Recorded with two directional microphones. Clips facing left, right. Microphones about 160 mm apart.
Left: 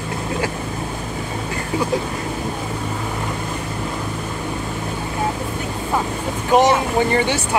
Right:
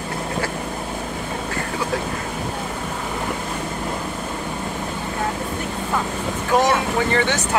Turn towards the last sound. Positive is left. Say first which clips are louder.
# left 2 dB
turn(degrees=15)  # may be behind; listen again after turning